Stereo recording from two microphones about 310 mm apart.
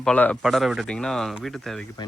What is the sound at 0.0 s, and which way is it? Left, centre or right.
Speech, centre.